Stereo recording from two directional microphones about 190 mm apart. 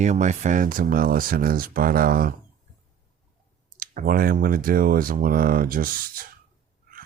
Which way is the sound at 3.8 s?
50° right (ahead or behind).